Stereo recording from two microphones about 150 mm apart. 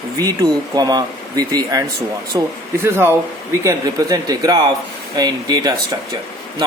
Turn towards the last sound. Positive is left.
turn(degrees=-25)  # may be behind; listen again after turning